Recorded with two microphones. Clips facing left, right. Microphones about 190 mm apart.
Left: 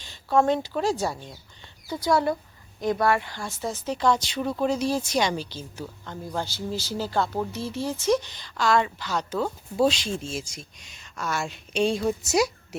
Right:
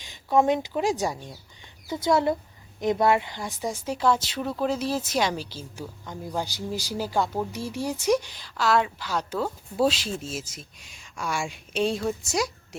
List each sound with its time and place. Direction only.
0.0 s a woman's voice: 15° right (ahead or behind); by 12.5 s 5° left (ahead or behind)